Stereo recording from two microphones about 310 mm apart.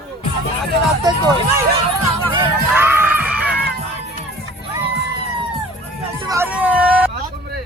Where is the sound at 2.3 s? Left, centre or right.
Centre.